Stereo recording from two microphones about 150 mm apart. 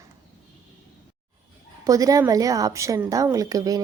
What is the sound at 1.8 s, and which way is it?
A woman's voice, 25° right (ahead or behind).